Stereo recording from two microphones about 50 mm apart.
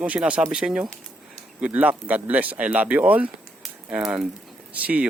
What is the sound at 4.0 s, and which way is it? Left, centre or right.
Speech, centre.